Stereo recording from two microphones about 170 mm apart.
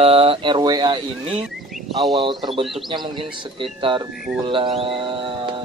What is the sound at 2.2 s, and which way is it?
Speech, 30° right (ahead or behind).